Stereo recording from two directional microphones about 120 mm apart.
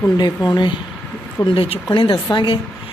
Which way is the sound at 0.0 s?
30° left (ahead or behind).